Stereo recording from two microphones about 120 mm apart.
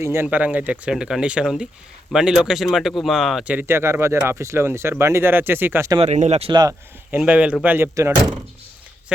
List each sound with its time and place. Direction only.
0.0 s speech: 20° right (ahead or behind); by 3.5 s 5° right (ahead or behind)
3.5 s speech: 15° right (ahead or behind)
6.0 s speech: 70° right (ahead or behind)
6.5 s speech: 35° right (ahead or behind)
7.1 s speech: 10° right (ahead or behind)
7.9 s speech: 25° right (ahead or behind)